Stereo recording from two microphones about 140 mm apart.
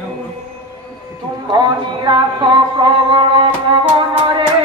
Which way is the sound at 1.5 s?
30° right (ahead or behind).